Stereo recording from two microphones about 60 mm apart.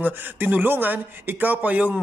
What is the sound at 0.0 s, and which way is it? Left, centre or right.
A man's voice, right.